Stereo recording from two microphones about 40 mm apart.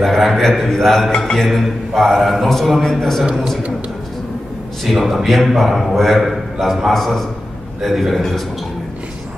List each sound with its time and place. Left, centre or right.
0.0 s a man's voice: centre
4.8 s a man's voice: centre